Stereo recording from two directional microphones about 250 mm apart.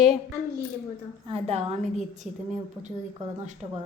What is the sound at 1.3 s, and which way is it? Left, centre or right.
Speech, right.